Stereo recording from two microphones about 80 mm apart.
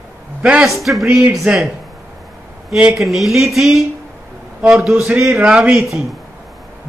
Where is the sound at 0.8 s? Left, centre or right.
Centre.